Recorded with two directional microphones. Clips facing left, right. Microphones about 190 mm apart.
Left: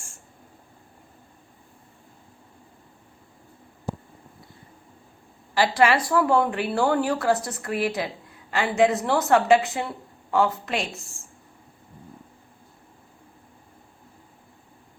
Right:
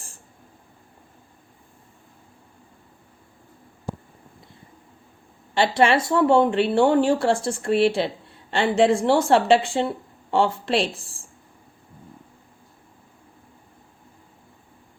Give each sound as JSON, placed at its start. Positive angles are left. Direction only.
{"t": 5.5, "sound": "speech", "side_deg": -25}